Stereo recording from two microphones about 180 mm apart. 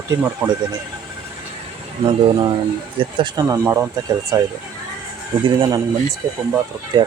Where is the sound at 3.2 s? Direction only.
20° right (ahead or behind).